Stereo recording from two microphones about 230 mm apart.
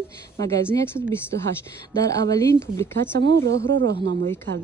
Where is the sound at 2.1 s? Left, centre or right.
Centre.